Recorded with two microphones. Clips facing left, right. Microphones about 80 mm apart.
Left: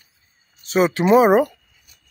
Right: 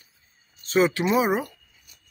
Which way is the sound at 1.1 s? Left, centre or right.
Left.